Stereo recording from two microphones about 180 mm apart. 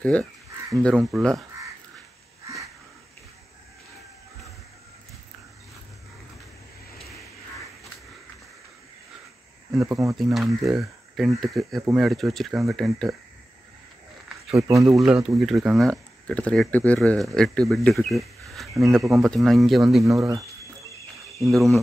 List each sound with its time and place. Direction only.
0.0 s speech: 5° left (ahead or behind)
9.8 s speech: 15° right (ahead or behind)
10.1 s speech: centre (ahead or behind)
14.6 s speech: 20° right (ahead or behind)
15.0 s speech: 5° right (ahead or behind)
21.5 s speech: centre (ahead or behind)